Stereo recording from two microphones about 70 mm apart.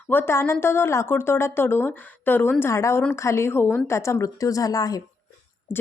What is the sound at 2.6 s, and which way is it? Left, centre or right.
A woman's voice, left.